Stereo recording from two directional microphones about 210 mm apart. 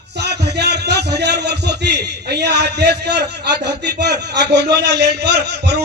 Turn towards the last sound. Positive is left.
turn(degrees=-50)  # may be behind; listen again after turning